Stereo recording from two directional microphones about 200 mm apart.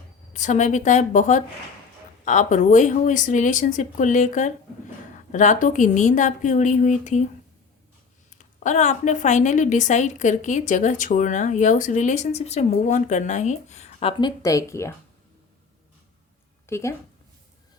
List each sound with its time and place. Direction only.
0.3 s a woman's voice: 35° left (ahead or behind)
8.4 s a woman's voice: 35° left (ahead or behind); by 14.9 s 15° left (ahead or behind)
16.6 s a woman's voice: 15° left (ahead or behind)